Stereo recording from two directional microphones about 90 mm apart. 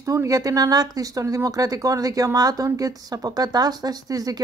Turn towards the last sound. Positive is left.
turn(degrees=-45)  # may be behind; listen again after turning